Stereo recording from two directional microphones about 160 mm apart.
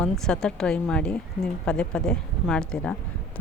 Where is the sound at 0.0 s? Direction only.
5° left (ahead or behind).